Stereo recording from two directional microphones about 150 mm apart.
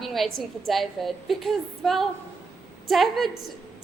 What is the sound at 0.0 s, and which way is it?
A woman's voice, centre (ahead or behind).